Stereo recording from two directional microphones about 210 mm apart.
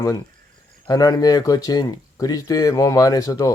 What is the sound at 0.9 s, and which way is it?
Speech, 15° left (ahead or behind).